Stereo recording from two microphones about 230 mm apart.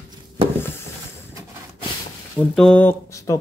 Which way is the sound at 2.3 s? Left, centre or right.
Centre.